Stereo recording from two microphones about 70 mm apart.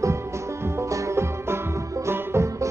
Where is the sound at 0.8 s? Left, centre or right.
Right.